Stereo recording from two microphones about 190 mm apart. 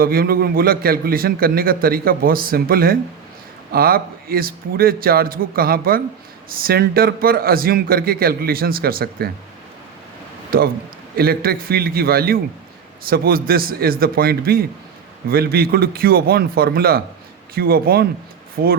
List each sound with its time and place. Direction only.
0.0 s a man's voice: 50° right (ahead or behind)
10.5 s a man's voice: 50° right (ahead or behind)